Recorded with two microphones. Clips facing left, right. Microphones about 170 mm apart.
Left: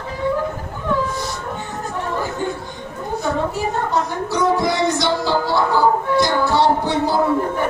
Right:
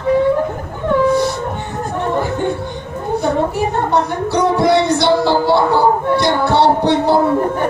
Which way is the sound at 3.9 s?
65° right (ahead or behind).